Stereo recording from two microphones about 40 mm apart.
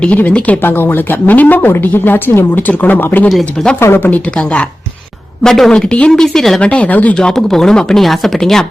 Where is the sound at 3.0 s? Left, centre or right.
Left.